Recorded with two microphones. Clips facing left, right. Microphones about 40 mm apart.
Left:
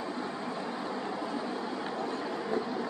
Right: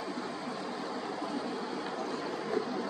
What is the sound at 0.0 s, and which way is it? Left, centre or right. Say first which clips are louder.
Vehicle: left 2 dB; centre.